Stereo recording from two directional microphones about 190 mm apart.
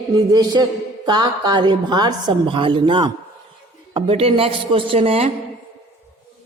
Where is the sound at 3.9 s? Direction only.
30° right (ahead or behind).